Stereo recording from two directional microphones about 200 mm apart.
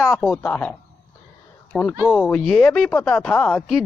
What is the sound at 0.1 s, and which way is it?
A man's voice, 5° left (ahead or behind).